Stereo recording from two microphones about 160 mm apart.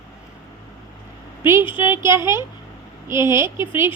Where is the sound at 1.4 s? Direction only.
15° right (ahead or behind).